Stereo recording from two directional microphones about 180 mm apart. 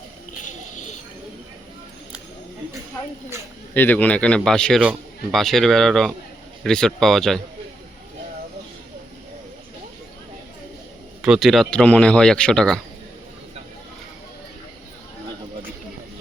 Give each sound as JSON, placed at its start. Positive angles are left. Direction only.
{"t": 0.4, "sound": "a sound", "side_deg": 40}
{"t": 3.8, "sound": "speech", "side_deg": 10}
{"t": 11.2, "sound": "speech", "side_deg": 0}